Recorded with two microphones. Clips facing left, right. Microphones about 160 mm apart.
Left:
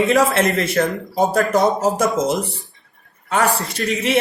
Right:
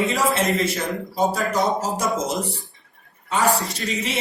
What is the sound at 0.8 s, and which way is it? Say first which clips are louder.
Speech: left 5 dB; 65° left (ahead or behind).